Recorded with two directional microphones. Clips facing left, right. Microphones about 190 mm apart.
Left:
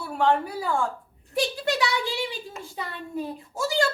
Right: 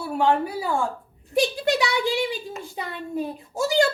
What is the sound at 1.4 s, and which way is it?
A woman's voice, 15° right (ahead or behind).